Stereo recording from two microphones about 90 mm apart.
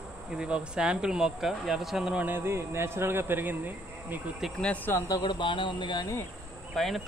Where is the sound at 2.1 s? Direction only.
20° right (ahead or behind).